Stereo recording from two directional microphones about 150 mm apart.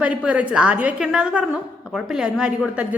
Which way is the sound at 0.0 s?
10° right (ahead or behind).